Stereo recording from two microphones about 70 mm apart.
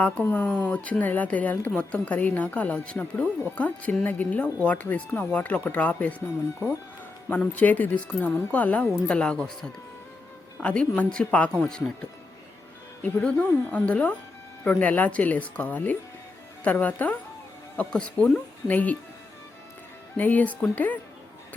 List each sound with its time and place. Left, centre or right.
0.0 s speech: left
7.3 s speech: left
10.6 s speech: centre
13.0 s speech: left
20.1 s speech: left